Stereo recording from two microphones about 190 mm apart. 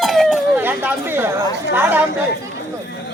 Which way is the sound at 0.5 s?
10° right (ahead or behind).